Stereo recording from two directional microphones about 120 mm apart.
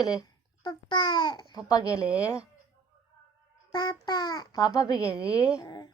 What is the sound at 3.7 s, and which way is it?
A child's voice, 40° left (ahead or behind).